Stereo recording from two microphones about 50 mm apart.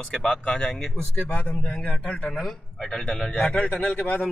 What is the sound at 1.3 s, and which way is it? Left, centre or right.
A man's voice, left.